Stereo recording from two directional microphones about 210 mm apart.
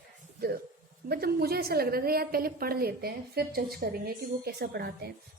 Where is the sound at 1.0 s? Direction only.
50° right (ahead or behind).